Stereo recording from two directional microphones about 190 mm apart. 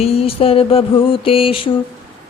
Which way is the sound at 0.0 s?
30° left (ahead or behind).